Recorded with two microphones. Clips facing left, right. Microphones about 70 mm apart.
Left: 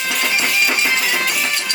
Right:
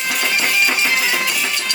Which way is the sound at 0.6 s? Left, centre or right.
Centre.